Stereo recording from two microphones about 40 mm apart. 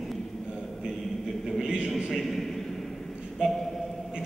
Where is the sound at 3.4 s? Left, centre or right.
Right.